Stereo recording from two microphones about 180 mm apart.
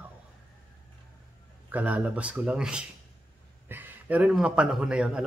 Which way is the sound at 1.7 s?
10° right (ahead or behind).